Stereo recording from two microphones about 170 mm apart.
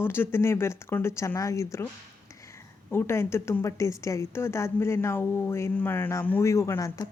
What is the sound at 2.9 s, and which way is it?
Speech, 15° left (ahead or behind).